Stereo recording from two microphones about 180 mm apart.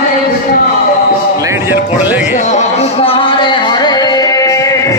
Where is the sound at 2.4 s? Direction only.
40° left (ahead or behind); by 5.0 s 20° left (ahead or behind).